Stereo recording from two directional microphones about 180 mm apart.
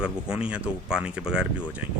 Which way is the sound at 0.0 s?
5° right (ahead or behind).